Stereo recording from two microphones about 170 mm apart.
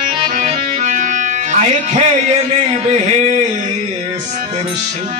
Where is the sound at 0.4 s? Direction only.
45° right (ahead or behind).